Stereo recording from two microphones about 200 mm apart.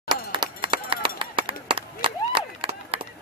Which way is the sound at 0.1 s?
25° right (ahead or behind).